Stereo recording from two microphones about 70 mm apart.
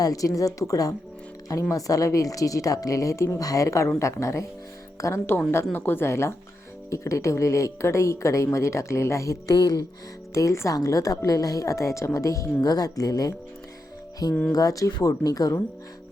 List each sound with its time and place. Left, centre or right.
0.0 s a woman's voice: left
5.7 s a woman's voice: left
10.3 s a woman's voice: left
14.5 s a woman's voice: left